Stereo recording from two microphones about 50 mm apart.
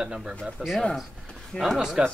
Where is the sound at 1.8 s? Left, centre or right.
Centre.